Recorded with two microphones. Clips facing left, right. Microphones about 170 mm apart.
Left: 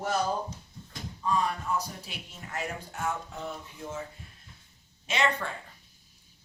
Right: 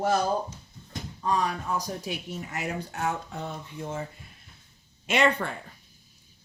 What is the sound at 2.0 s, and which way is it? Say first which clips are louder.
A woman's voice: right 10 dB; 75° right (ahead or behind).